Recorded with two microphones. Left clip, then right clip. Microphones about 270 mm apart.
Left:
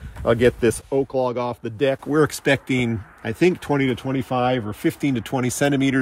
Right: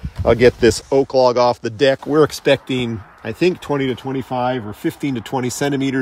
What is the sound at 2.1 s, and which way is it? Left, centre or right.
Speech, centre.